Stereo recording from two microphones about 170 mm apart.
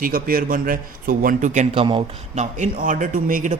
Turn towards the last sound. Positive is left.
turn(degrees=-50)  # may be behind; listen again after turning